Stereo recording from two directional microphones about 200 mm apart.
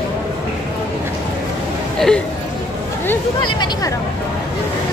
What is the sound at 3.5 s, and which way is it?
Speech, 20° left (ahead or behind).